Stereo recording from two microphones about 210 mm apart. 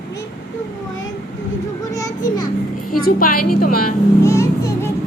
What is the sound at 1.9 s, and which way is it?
Children playing, 15° left (ahead or behind).